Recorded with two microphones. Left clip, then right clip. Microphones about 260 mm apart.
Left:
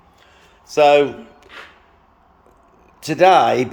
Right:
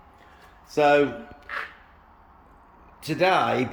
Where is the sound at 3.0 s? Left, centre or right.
Centre.